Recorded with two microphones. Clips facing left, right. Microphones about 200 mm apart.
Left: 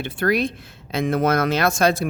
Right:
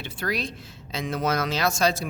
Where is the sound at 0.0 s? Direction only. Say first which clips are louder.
Left 9 dB; 55° left (ahead or behind).